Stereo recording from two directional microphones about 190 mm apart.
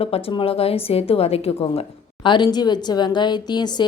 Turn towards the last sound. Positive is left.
turn(degrees=20)  # may be behind; listen again after turning